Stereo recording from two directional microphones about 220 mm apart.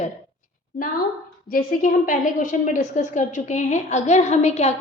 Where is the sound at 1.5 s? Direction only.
40° left (ahead or behind).